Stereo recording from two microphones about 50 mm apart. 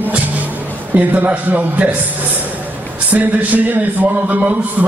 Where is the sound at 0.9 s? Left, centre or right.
Right.